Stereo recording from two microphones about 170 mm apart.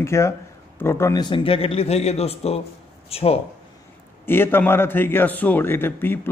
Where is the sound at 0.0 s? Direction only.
15° left (ahead or behind); by 3.3 s 35° left (ahead or behind).